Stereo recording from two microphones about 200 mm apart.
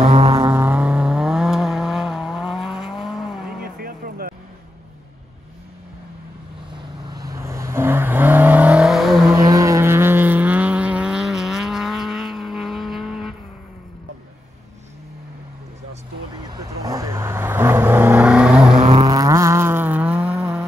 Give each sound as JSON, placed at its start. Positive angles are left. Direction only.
{"t": 0.1, "sound": "vehicle", "side_deg": -25}
{"t": 0.5, "sound": "vehicle", "side_deg": -10}
{"t": 3.6, "sound": "vehicle", "side_deg": -50}
{"t": 7.3, "sound": "vehicle", "side_deg": -15}
{"t": 9.3, "sound": "vehicle", "side_deg": -15}
{"t": 16.4, "sound": "vehicle", "side_deg": -15}
{"t": 18.9, "sound": "vehicle", "side_deg": -20}